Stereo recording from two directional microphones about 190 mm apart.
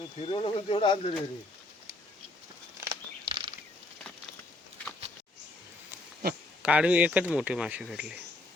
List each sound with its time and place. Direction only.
0.3 s speech: 30° left (ahead or behind)
2.8 s a sound: 25° right (ahead or behind)
6.6 s speech: 5° right (ahead or behind)